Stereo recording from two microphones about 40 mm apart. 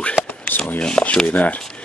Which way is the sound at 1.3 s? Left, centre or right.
Left.